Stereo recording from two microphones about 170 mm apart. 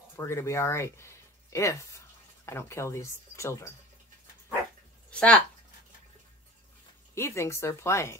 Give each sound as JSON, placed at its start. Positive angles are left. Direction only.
{"t": 0.1, "sound": "speech", "side_deg": 15}
{"t": 5.1, "sound": "speech", "side_deg": 5}
{"t": 7.2, "sound": "speech", "side_deg": 15}